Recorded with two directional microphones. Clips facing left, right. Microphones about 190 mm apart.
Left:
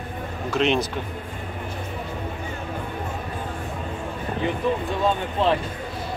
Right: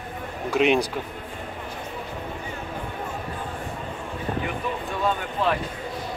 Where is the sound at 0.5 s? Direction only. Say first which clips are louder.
Right 2 dB; 10° right (ahead or behind).